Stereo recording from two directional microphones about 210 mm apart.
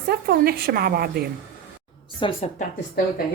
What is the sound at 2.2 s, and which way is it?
Speech, 25° left (ahead or behind).